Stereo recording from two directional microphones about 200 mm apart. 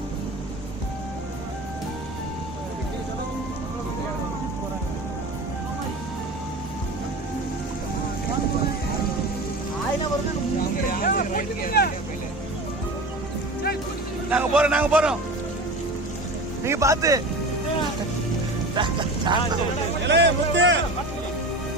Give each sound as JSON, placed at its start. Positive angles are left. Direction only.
{"t": 10.8, "sound": "vehicle", "side_deg": 45}
{"t": 14.3, "sound": "speech", "side_deg": -5}
{"t": 16.6, "sound": "speech", "side_deg": -15}
{"t": 18.8, "sound": "speech", "side_deg": -25}
{"t": 20.1, "sound": "a man's voice", "side_deg": -60}